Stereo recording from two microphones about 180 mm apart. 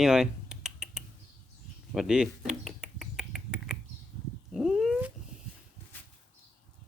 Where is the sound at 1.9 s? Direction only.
5° right (ahead or behind).